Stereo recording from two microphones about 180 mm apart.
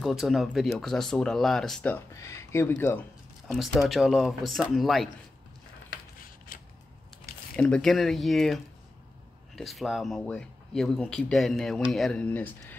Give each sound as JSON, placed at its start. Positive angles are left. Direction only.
{"t": 0.0, "sound": "speech", "side_deg": 0}
{"t": 3.4, "sound": "speech", "side_deg": 0}
{"t": 6.5, "sound": "scissors", "side_deg": 50}
{"t": 7.5, "sound": "speech", "side_deg": 5}
{"t": 9.6, "sound": "speech", "side_deg": 0}